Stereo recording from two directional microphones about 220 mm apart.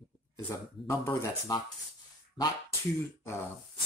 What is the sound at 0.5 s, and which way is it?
Speech, 10° left (ahead or behind).